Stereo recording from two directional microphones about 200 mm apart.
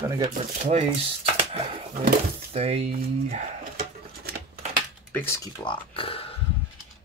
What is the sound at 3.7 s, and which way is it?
Patter, 45° right (ahead or behind).